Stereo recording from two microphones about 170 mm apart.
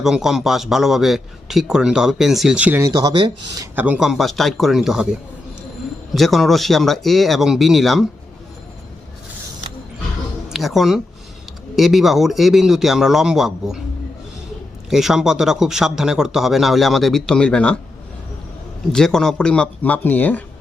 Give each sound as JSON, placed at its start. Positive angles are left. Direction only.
{"t": 0.0, "sound": "a man's voice", "side_deg": 0}
{"t": 3.8, "sound": "a man's voice", "side_deg": -10}
{"t": 6.1, "sound": "a man's voice", "side_deg": 0}
{"t": 10.5, "sound": "a woman's voice", "side_deg": 0}
{"t": 14.8, "sound": "a man's voice", "side_deg": 0}
{"t": 18.9, "sound": "a man's voice", "side_deg": 5}